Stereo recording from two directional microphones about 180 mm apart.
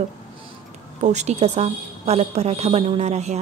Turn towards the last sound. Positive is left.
turn(degrees=-40)  # may be behind; listen again after turning